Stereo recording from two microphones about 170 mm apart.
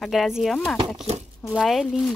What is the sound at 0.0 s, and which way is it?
Speech, centre (ahead or behind).